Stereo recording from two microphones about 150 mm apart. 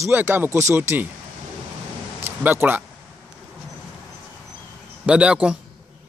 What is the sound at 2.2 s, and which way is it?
Speech, 15° right (ahead or behind).